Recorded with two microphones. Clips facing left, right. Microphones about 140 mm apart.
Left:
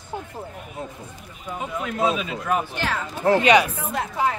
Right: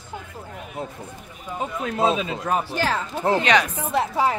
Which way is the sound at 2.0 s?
25° right (ahead or behind).